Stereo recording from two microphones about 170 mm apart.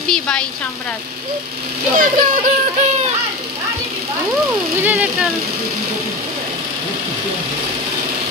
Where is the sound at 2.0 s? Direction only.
50° right (ahead or behind).